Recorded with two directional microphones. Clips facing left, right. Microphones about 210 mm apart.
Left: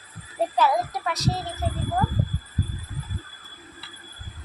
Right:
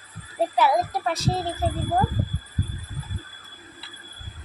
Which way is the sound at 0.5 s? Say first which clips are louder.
Right 1 dB; 15° right (ahead or behind).